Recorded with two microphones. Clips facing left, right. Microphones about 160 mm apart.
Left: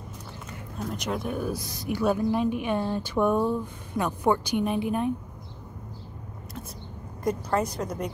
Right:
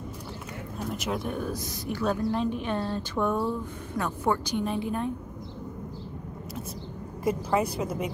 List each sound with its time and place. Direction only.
0.7 s speech: 5° right (ahead or behind); by 5.1 s 15° left (ahead or behind)
7.2 s a woman's voice: 5° right (ahead or behind)